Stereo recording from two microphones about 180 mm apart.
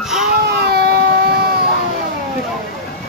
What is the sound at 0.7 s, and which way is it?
Vehicle, 60° right (ahead or behind).